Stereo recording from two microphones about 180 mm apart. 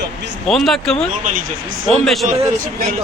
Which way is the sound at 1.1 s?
50° right (ahead or behind).